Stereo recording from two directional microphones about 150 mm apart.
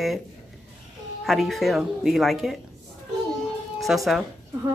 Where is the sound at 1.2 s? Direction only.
Centre (ahead or behind).